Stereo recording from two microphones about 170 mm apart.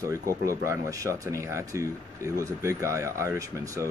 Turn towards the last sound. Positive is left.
turn(degrees=-20)  # may be behind; listen again after turning